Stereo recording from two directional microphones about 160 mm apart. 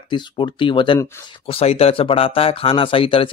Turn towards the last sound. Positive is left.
turn(degrees=35)  # may be behind; listen again after turning